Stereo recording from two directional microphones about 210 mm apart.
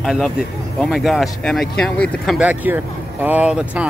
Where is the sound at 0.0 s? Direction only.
Centre (ahead or behind).